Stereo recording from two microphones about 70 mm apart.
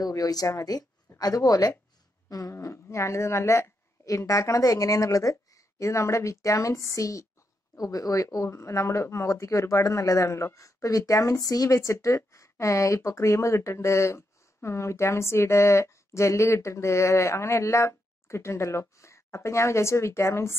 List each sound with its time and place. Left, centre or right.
0.0 s speech: left
2.2 s a sound: left
2.5 s speech: left